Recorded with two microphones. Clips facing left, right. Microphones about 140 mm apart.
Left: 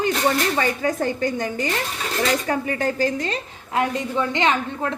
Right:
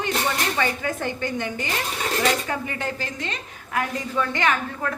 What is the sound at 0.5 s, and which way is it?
A woman's voice, 35° left (ahead or behind).